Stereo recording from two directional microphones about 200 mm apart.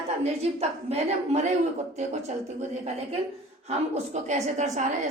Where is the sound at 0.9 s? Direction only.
35° right (ahead or behind).